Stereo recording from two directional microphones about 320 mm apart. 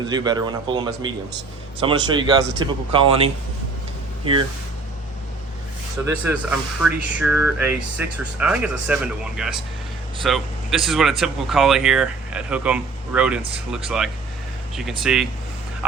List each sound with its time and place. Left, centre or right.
0.1 s speech: centre
6.1 s speech: centre